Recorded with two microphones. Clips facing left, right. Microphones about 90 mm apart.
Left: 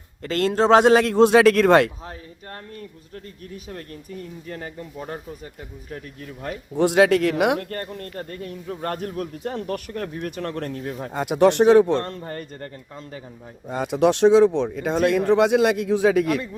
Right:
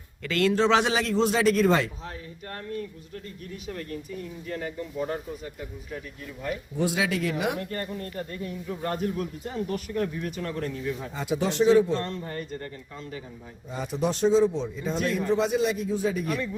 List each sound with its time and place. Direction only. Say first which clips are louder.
0.2 s speech: left 3 dB; 40° left (ahead or behind); by 1.9 s 65° left (ahead or behind)
6.4 s speech: left 6 dB; 65° left (ahead or behind); by 12.7 s 45° left (ahead or behind)
13.7 s speech: left 9 dB; 65° left (ahead or behind); by 16.4 s 90° left